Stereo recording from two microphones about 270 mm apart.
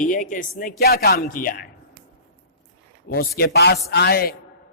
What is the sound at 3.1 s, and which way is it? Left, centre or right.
A man's voice, left.